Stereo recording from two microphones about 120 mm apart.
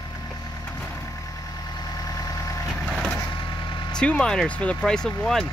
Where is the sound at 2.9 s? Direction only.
5° left (ahead or behind).